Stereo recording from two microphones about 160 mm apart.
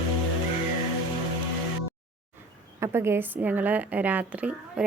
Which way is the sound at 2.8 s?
15° right (ahead or behind).